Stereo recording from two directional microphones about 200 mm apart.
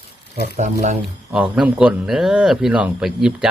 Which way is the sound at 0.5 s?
35° right (ahead or behind).